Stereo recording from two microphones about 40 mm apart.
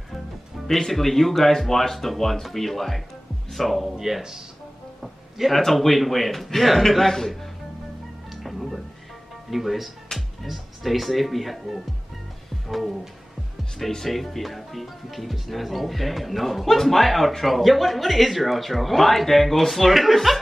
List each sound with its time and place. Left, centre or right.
0.7 s speech: centre
3.9 s speech: centre
5.0 s a sound: centre
5.6 s speech: centre
8.3 s music: centre
9.5 s speech: centre